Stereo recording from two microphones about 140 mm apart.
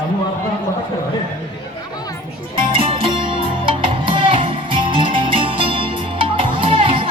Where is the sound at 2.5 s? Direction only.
35° right (ahead or behind).